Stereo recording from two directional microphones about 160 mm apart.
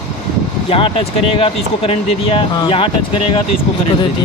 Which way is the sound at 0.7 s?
35° left (ahead or behind).